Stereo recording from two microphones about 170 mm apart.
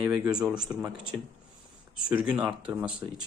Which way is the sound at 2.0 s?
5° right (ahead or behind).